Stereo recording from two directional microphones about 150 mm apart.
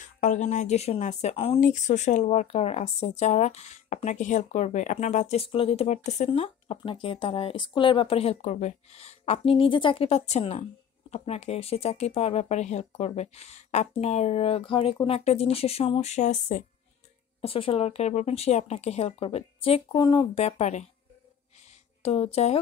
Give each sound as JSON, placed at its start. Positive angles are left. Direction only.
{"t": 0.0, "sound": "speech", "side_deg": 55}
{"t": 1.6, "sound": "speech", "side_deg": 55}
{"t": 17.4, "sound": "speech", "side_deg": 40}
{"t": 20.3, "sound": "speech", "side_deg": 45}
{"t": 22.0, "sound": "speech", "side_deg": 40}